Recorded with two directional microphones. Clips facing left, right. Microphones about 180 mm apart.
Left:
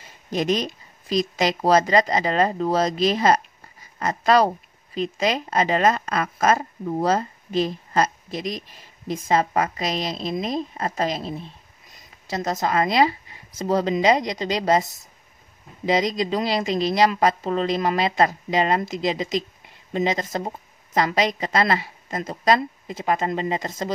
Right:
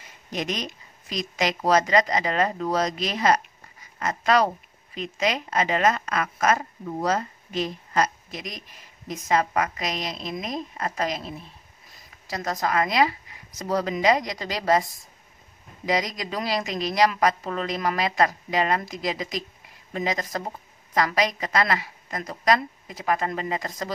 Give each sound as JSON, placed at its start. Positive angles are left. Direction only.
{"t": 0.3, "sound": "a woman's voice", "side_deg": 30}